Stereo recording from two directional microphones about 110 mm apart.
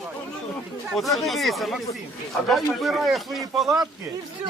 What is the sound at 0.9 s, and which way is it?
Speech, centre (ahead or behind).